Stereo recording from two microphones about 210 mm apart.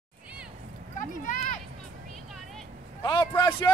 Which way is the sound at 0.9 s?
35° left (ahead or behind).